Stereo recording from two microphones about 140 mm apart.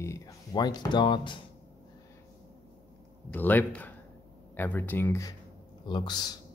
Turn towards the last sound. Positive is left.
turn(degrees=30)  # may be behind; listen again after turning